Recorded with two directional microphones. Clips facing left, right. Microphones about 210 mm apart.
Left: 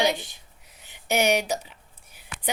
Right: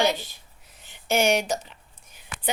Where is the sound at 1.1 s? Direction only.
15° left (ahead or behind).